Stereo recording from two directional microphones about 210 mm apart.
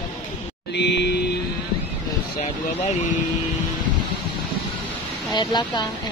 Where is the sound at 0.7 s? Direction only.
55° left (ahead or behind).